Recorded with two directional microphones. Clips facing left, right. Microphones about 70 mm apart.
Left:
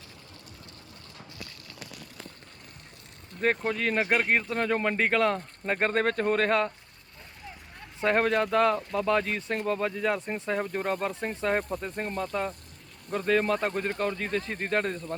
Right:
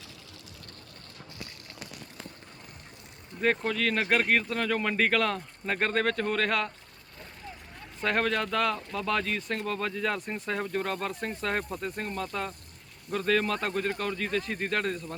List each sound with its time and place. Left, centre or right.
3.6 s speech: centre
8.0 s speech: centre
11.7 s speech: centre